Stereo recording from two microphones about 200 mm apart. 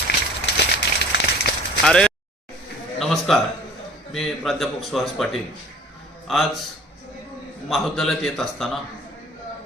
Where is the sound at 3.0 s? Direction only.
Centre (ahead or behind).